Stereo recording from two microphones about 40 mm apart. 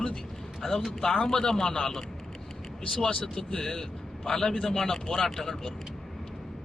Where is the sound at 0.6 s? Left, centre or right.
Centre.